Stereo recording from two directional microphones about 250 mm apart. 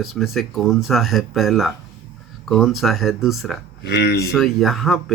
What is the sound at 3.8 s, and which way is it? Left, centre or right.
Speech, left.